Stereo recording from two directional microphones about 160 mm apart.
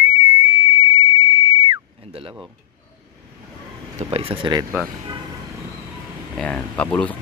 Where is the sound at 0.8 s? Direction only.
25° right (ahead or behind).